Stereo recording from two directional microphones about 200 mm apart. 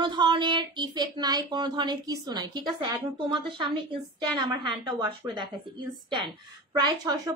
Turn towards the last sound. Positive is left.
turn(degrees=-20)  # may be behind; listen again after turning